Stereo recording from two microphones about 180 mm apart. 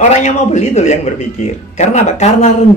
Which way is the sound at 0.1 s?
40° left (ahead or behind).